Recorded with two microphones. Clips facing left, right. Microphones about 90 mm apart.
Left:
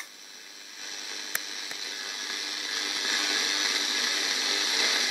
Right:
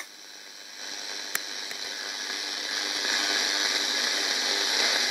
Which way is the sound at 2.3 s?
15° right (ahead or behind).